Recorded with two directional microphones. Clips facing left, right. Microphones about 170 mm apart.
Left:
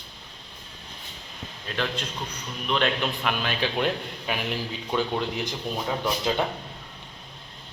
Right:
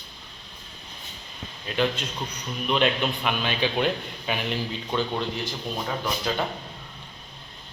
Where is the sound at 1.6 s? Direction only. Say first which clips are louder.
Right 4 dB; 5° right (ahead or behind).